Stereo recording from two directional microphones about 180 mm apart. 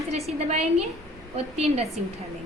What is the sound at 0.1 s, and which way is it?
A woman's voice, 35° right (ahead or behind).